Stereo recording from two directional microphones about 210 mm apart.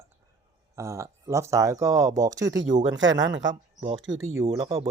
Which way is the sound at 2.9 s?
60° right (ahead or behind).